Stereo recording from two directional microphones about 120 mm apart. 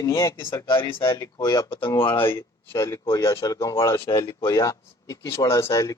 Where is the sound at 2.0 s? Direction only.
45° left (ahead or behind).